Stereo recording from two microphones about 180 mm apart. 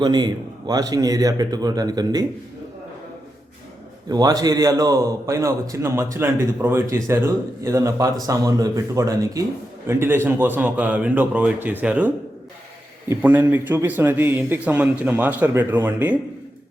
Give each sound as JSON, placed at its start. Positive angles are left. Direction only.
{"t": 0.0, "sound": "a man's voice", "side_deg": -25}
{"t": 4.1, "sound": "a man's voice", "side_deg": -20}